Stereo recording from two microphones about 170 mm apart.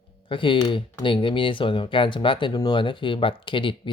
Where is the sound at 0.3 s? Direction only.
30° left (ahead or behind).